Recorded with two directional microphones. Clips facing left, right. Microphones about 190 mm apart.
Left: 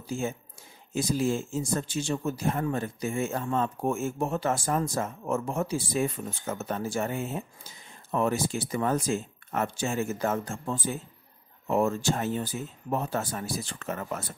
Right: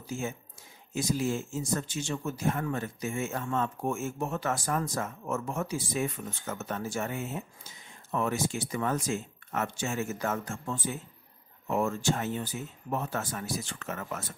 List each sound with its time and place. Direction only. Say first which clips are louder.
0.0 s speech: left 3 dB; 30° left (ahead or behind)